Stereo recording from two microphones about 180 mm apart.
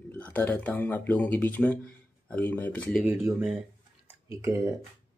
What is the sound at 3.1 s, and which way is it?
Speech, 10° right (ahead or behind).